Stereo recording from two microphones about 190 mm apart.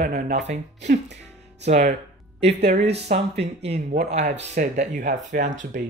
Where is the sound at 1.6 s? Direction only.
40° right (ahead or behind).